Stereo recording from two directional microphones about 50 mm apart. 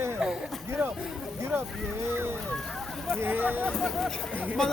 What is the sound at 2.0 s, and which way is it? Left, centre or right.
Speech, right.